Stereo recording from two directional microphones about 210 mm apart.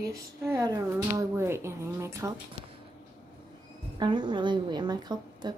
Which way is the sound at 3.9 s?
20° right (ahead or behind).